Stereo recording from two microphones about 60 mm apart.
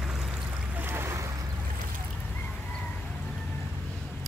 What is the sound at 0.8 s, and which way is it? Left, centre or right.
Boat, right.